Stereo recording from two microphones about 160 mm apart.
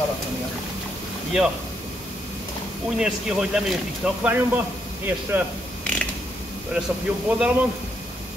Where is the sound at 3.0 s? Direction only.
5° right (ahead or behind).